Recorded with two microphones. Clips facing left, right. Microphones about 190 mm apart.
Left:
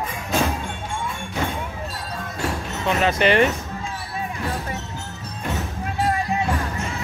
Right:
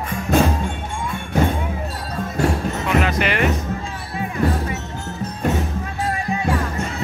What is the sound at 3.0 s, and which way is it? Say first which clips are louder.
Music: left 7 dB; 25° left (ahead or behind).